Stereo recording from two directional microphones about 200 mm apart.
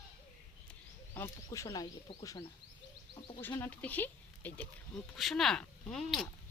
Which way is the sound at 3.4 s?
10° left (ahead or behind).